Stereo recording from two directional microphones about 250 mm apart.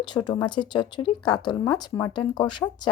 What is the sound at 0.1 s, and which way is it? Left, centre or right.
Speech, centre.